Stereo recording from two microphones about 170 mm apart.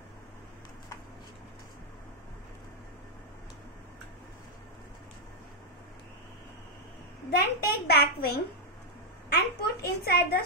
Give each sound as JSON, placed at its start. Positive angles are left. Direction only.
{"t": 7.2, "sound": "a child's voice", "side_deg": 65}